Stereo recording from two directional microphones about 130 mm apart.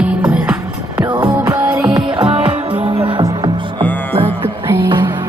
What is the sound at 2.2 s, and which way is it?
Music, 45° right (ahead or behind).